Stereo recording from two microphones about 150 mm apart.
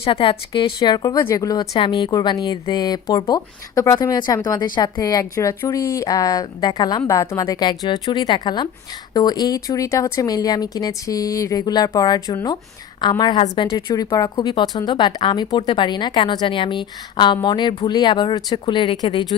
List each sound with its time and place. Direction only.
0.0 s speech: 35° left (ahead or behind)